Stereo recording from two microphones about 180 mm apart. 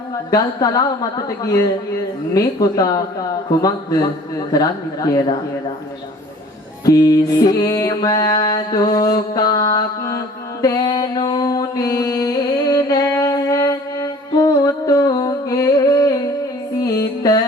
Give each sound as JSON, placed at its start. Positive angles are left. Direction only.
{"t": 0.3, "sound": "a woman's voice", "side_deg": 20}
{"t": 4.5, "sound": "a woman's voice", "side_deg": 20}
{"t": 6.8, "sound": "mantra", "side_deg": 20}
{"t": 14.3, "sound": "a sound", "side_deg": 20}
{"t": 16.8, "sound": "music", "side_deg": 20}